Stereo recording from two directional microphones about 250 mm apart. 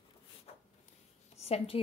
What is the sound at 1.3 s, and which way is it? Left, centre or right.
Speech, left.